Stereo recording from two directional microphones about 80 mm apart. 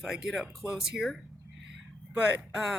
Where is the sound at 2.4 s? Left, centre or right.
Centre.